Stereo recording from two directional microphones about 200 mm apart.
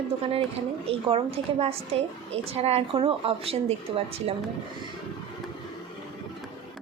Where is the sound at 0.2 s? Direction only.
30° right (ahead or behind).